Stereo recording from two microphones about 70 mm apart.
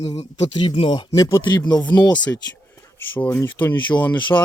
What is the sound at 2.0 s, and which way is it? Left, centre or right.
Speech, left.